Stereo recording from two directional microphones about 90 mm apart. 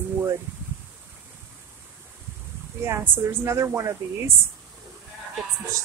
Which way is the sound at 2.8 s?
25° right (ahead or behind).